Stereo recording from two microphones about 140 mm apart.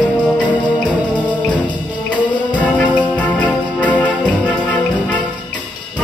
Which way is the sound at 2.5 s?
10° left (ahead or behind).